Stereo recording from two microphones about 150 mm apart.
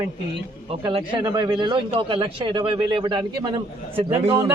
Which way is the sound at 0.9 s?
30° right (ahead or behind).